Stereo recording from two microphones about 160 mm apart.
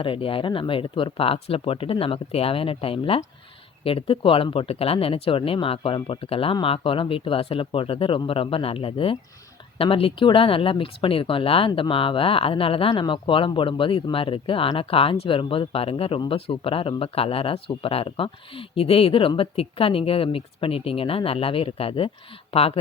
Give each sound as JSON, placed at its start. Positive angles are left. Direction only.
{"t": 0.0, "sound": "speech", "side_deg": 35}